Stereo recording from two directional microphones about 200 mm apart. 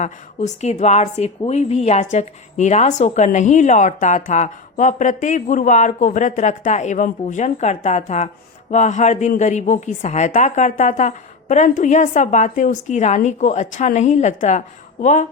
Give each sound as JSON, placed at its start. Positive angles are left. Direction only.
{"t": 0.0, "sound": "speech", "side_deg": 35}